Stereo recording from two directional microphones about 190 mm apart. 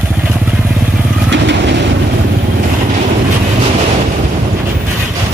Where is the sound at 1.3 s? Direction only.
70° right (ahead or behind).